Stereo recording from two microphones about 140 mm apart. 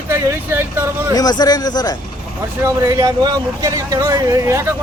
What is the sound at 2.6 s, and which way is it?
Speech, 25° right (ahead or behind).